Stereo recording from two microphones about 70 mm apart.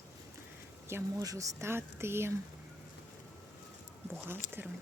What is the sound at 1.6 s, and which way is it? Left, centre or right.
Speech, right.